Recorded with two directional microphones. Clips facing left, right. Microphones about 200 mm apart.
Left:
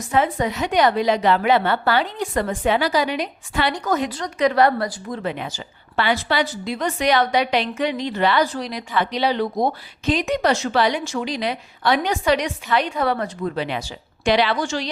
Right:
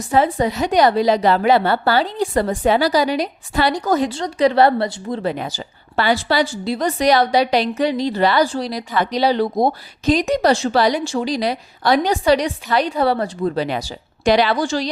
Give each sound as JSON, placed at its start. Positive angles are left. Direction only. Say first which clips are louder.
{"t": 0.0, "sound": "a woman's voice", "louder": "right 3 dB", "side_deg": -35}